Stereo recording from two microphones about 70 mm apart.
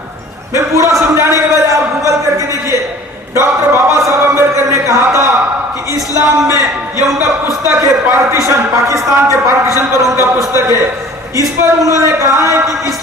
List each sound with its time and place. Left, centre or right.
0.5 s a man's voice: right
1.1 s a sound: right
6.1 s a man's voice: right
11.3 s a man's voice: right